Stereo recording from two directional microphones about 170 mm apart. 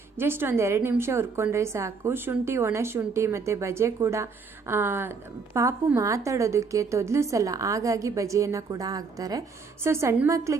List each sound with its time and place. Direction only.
0.2 s a woman's voice: 15° right (ahead or behind)